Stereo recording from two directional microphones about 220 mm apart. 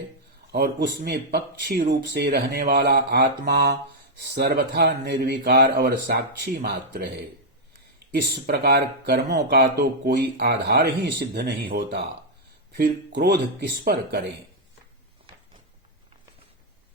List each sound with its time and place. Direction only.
0.5 s speech: 45° right (ahead or behind)